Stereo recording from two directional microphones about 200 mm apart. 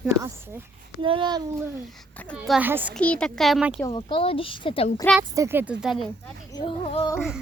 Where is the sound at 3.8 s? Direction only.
25° left (ahead or behind).